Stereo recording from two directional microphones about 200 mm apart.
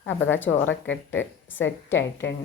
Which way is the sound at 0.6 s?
70° left (ahead or behind).